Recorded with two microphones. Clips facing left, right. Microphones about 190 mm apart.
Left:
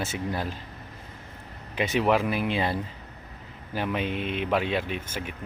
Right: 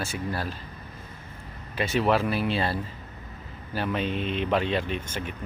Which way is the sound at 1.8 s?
15° left (ahead or behind).